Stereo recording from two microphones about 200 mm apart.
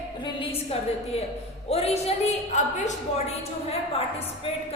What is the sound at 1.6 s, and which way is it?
A woman's voice, 30° left (ahead or behind).